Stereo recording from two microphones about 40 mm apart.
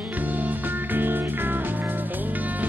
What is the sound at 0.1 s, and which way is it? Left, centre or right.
Music, right.